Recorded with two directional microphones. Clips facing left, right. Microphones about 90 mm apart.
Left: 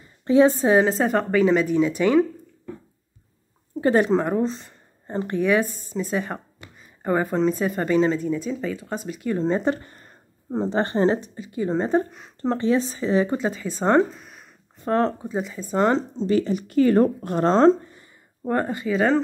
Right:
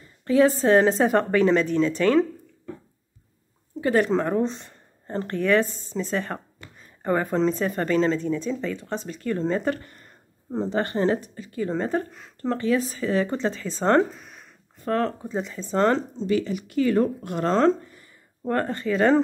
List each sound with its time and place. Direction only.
0.2 s speech: 20° left (ahead or behind)
3.8 s speech: 20° left (ahead or behind); by 4.7 s centre (ahead or behind)
5.0 s speech: 10° left (ahead or behind)
14.2 s a sound: 5° left (ahead or behind)
14.8 s speech: 25° left (ahead or behind)
15.2 s speech: 5° left (ahead or behind)
16.2 s speech: 35° left (ahead or behind)
18.5 s speech: 10° left (ahead or behind)